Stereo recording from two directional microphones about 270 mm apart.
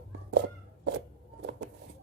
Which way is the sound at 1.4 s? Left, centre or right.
Right.